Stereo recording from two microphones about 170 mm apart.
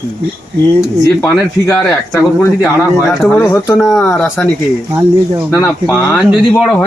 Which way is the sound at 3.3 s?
15° left (ahead or behind).